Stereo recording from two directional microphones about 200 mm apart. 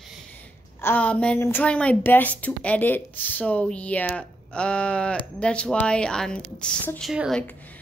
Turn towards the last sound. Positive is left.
turn(degrees=0)  # may be behind; listen again after turning